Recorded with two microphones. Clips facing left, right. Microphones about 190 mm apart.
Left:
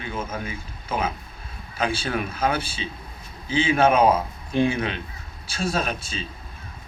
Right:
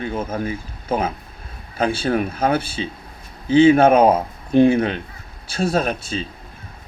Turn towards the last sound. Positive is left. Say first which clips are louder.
# right 6 dB
turn(degrees=-55)  # may be behind; listen again after turning